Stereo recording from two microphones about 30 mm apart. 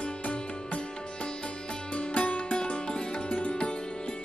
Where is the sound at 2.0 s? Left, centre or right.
Left.